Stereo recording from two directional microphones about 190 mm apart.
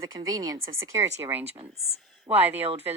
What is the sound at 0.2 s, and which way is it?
A woman's voice, 20° right (ahead or behind).